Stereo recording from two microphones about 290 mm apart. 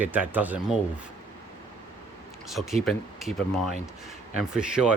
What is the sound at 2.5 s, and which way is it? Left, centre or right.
Speech, centre.